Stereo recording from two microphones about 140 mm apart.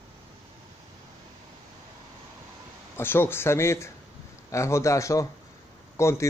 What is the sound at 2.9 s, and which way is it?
A man's voice, 15° left (ahead or behind).